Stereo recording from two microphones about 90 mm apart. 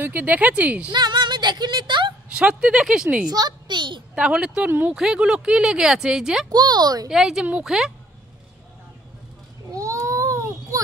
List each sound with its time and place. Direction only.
0.0 s speech: 20° right (ahead or behind)
0.9 s music: 55° right (ahead or behind)
2.3 s speech: 10° right (ahead or behind)
3.3 s a child's voice: 50° right (ahead or behind)
4.1 s speech: 10° right (ahead or behind)
4.6 s speech: 20° right (ahead or behind)
4.9 s speech: 10° right (ahead or behind)
6.5 s a woman's voice: 50° right (ahead or behind)
7.1 s a woman's voice: 5° right (ahead or behind)
9.7 s baby cry: 40° right (ahead or behind)